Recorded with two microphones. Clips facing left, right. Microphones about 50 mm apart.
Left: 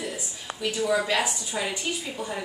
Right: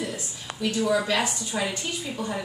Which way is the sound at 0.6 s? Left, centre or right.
Centre.